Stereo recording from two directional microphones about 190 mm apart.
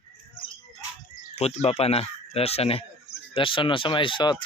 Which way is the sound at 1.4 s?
35° left (ahead or behind).